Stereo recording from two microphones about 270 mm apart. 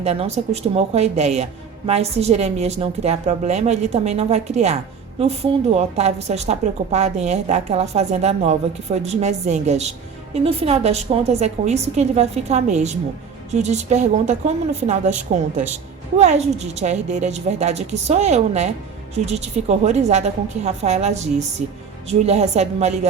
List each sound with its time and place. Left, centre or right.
0.0 s a woman's voice: right
16.1 s a woman's voice: right